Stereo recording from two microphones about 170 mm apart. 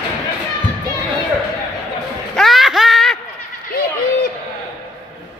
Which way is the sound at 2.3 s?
Centre (ahead or behind).